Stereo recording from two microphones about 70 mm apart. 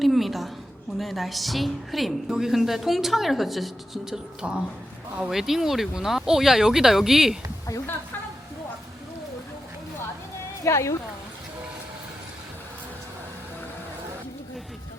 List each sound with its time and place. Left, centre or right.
0.0 s a sound: centre
0.9 s speech: centre
10.6 s speech: left